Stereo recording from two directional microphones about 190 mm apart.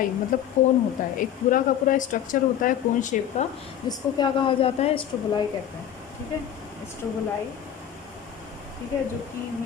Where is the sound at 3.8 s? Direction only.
25° left (ahead or behind).